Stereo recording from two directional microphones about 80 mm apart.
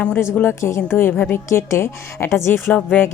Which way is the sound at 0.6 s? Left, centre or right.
Left.